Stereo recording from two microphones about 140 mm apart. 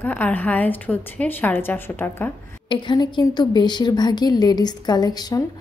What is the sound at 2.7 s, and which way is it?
Speech, 30° left (ahead or behind).